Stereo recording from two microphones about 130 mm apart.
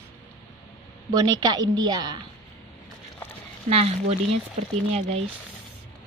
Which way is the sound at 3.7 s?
50° right (ahead or behind).